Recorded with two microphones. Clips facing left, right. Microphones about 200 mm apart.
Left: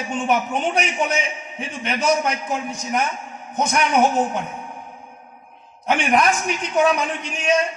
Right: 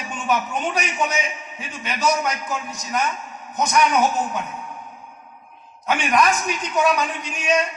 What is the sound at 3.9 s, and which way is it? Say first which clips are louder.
Speech: left 3 dB; 30° left (ahead or behind).